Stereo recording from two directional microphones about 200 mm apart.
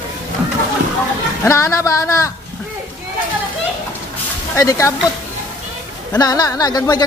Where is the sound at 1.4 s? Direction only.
15° left (ahead or behind).